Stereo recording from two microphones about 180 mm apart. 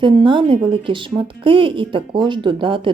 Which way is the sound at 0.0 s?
25° right (ahead or behind).